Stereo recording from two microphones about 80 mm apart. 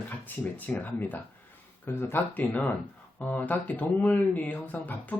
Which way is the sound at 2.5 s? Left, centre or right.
Centre.